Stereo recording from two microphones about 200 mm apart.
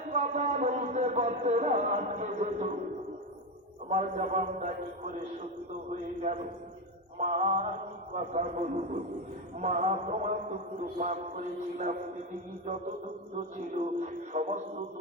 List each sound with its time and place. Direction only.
0.1 s a man's voice: 35° right (ahead or behind)
3.8 s a man's voice: 35° right (ahead or behind)
7.2 s a man's voice: 35° right (ahead or behind)
9.6 s a man's voice: 35° right (ahead or behind)
13.7 s a man's voice: 35° right (ahead or behind)